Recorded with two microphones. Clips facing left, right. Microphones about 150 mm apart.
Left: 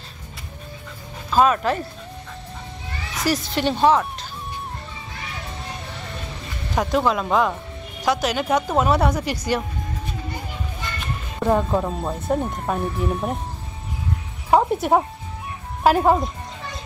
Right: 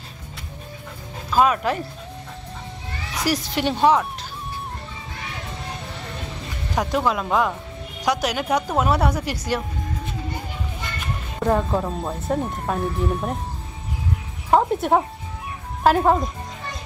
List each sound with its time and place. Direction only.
1.3 s a woman's voice: 10° right (ahead or behind)
3.3 s a woman's voice: 10° right (ahead or behind)
6.9 s a woman's voice: 5° right (ahead or behind)
11.3 s speech: 5° left (ahead or behind)
14.5 s speech: 5° left (ahead or behind)